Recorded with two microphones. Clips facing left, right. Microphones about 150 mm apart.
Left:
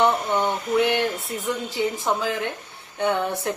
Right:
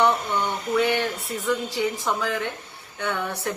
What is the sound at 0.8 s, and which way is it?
A man's voice, 15° left (ahead or behind).